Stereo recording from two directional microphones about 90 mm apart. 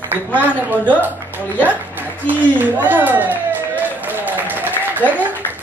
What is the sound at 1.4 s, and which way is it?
Speech, 20° left (ahead or behind).